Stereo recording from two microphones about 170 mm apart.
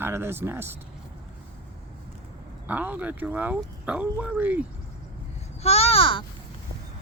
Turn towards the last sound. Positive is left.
turn(degrees=30)  # may be behind; listen again after turning